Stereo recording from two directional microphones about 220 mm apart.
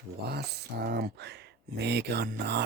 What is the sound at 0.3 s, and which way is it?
Speech, 45° right (ahead or behind).